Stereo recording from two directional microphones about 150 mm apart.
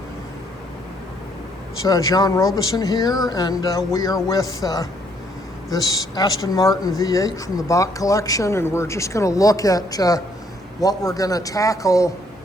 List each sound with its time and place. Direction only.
1.8 s speech: 25° left (ahead or behind)